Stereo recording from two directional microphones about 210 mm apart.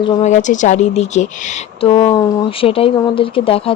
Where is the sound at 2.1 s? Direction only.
15° left (ahead or behind).